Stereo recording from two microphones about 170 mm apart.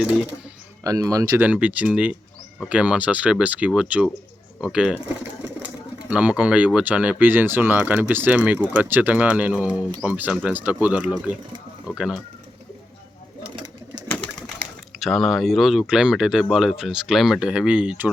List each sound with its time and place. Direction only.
0.9 s speech: 20° right (ahead or behind)
1.5 s speech: 10° right (ahead or behind)
14.9 s speech: centre (ahead or behind)